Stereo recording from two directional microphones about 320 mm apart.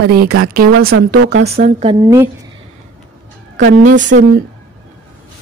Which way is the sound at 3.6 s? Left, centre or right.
Right.